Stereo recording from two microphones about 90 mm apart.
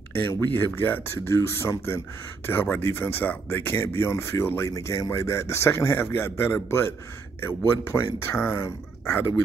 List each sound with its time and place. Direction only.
0.1 s speech: 25° left (ahead or behind)